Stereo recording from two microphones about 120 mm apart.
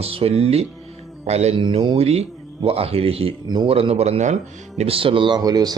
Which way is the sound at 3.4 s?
40° right (ahead or behind).